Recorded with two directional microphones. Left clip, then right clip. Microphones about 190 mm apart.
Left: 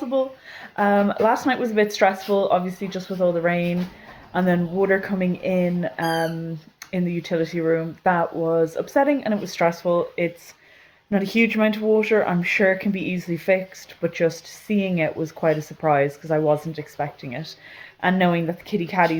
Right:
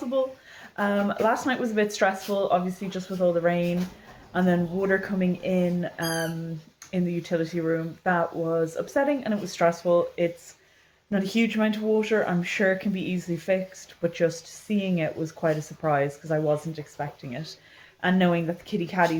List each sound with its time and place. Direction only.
0.1 s speech: 30° left (ahead or behind)